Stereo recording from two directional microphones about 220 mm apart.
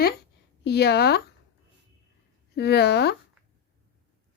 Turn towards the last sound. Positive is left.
turn(degrees=50)  # may be behind; listen again after turning